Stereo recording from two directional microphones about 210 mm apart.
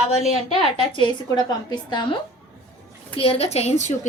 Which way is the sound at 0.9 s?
20° left (ahead or behind).